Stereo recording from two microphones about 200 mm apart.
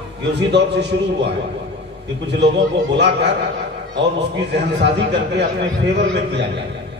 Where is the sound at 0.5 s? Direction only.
60° right (ahead or behind).